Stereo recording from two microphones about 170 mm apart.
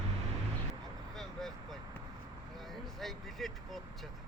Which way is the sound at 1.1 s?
Centre (ahead or behind).